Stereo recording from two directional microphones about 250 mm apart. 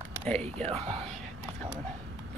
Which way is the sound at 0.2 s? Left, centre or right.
Centre.